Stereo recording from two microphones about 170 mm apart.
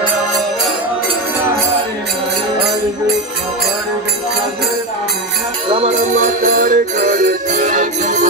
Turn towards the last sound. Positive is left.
turn(degrees=-50)  # may be behind; listen again after turning